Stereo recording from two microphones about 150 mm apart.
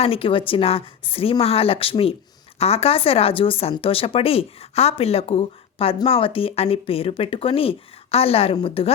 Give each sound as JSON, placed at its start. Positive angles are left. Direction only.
{"t": 0.0, "sound": "speech", "side_deg": 40}